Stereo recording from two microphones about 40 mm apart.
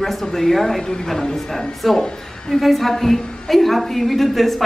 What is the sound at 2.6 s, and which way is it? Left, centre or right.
A woman's voice, centre.